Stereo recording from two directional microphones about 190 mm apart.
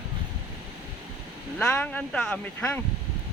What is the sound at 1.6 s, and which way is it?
Speech, 5° left (ahead or behind).